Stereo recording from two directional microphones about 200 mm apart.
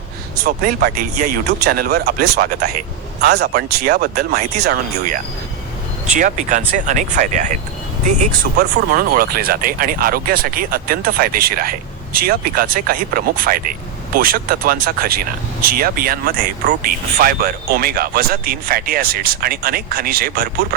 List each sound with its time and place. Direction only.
0.4 s speech: 45° right (ahead or behind)
6.1 s speech: 40° right (ahead or behind)
8.5 s speech: 45° right (ahead or behind)